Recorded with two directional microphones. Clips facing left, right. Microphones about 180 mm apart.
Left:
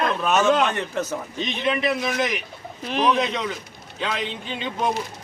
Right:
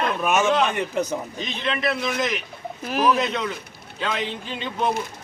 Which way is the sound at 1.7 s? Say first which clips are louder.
Left 1 dB; 10° left (ahead or behind).